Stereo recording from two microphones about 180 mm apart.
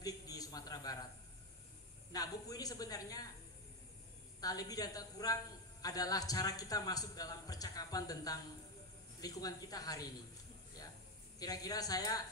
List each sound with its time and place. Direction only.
0.0 s a sound: 20° left (ahead or behind)
2.1 s a man's voice: 20° left (ahead or behind)
4.4 s a man's voice: 20° left (ahead or behind)
11.3 s a man's voice: 20° left (ahead or behind)